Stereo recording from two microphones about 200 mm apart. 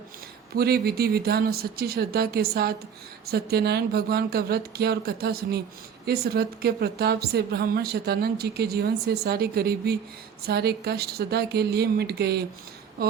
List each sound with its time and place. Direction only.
0.5 s a woman's voice: 50° right (ahead or behind)